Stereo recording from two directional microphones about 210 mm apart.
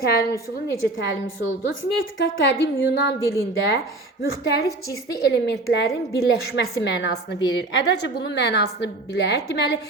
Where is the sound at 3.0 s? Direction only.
50° left (ahead or behind).